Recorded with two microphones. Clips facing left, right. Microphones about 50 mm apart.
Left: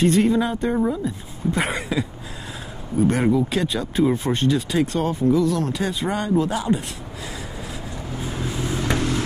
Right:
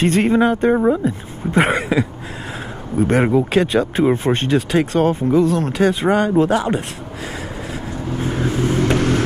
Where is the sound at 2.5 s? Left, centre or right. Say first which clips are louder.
Right 3 dB; right.